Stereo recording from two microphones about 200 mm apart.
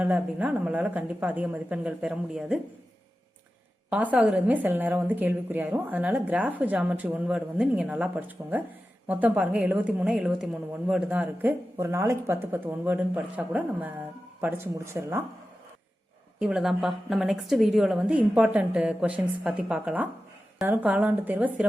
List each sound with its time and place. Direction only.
0.0 s a woman's voice: 5° right (ahead or behind)
3.8 s a woman's voice: 5° right (ahead or behind)
16.4 s a woman's voice: 5° right (ahead or behind)